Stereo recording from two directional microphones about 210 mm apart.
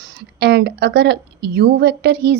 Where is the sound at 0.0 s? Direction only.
50° right (ahead or behind).